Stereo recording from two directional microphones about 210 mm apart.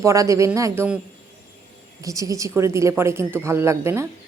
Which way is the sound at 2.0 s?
15° right (ahead or behind).